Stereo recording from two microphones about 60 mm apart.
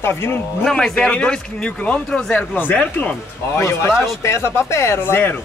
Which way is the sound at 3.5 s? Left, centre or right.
Left.